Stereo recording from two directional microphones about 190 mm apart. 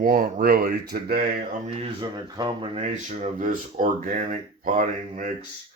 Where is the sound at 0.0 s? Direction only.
50° right (ahead or behind).